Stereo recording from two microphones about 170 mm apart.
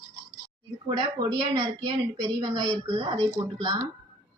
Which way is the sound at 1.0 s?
25° right (ahead or behind).